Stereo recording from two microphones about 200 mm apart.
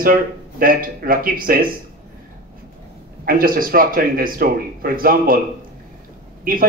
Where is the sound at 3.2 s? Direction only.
45° right (ahead or behind).